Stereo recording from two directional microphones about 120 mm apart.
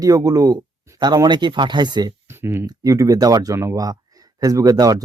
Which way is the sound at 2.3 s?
20° right (ahead or behind).